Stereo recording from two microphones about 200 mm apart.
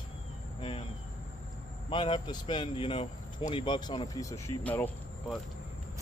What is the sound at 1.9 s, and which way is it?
Speech, 25° left (ahead or behind).